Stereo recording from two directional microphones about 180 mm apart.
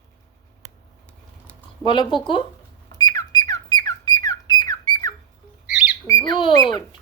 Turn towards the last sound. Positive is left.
turn(degrees=25)  # may be behind; listen again after turning